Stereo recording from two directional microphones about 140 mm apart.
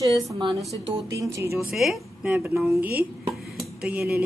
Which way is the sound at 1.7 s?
Centre (ahead or behind).